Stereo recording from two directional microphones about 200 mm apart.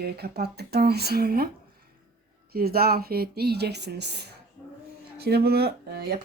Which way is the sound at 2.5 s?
50° right (ahead or behind).